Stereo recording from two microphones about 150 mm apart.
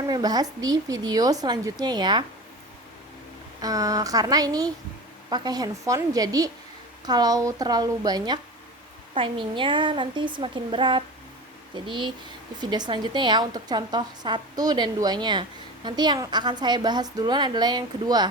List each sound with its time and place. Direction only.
0.1 s a woman's voice: 25° right (ahead or behind)
3.6 s a woman's voice: 25° right (ahead or behind)